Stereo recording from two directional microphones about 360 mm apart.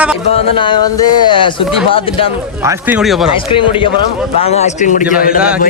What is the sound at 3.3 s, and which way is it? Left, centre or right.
A man's voice, centre.